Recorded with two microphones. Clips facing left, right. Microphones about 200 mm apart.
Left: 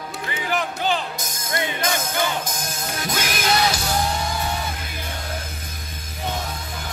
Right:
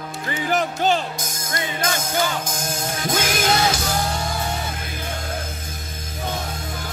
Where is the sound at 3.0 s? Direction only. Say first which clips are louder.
Right 3 dB; 50° right (ahead or behind).